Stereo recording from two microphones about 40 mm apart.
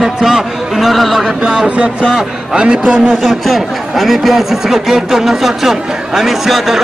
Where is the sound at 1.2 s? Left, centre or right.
Centre.